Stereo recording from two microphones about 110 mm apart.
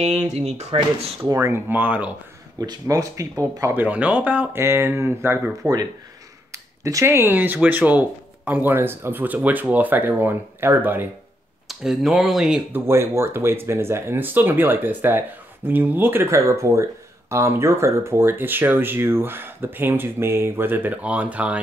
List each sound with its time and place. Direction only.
0.0 s speech: 70° right (ahead or behind)
1.2 s speech: 25° right (ahead or behind)
2.6 s speech: 35° right (ahead or behind)
3.7 s speech: 15° right (ahead or behind)
11.6 s speech: 5° right (ahead or behind)
12.7 s speech: 25° right (ahead or behind)